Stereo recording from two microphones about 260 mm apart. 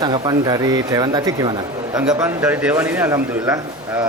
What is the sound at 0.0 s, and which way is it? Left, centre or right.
A man's voice, centre.